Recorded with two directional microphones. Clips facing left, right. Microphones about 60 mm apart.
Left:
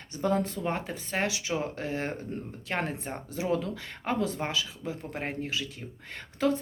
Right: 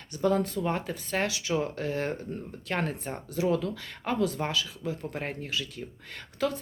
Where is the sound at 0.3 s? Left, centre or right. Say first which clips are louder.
Right 2 dB; left.